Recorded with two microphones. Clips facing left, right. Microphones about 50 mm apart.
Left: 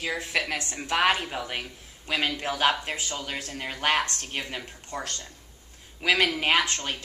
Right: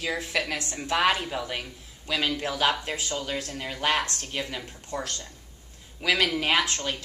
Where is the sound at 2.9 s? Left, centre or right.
Centre.